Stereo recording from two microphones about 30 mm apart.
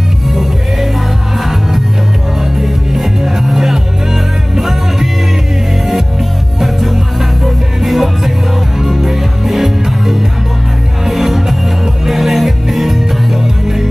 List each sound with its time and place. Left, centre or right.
0.3 s music: centre
2.5 s music: centre
6.6 s music: centre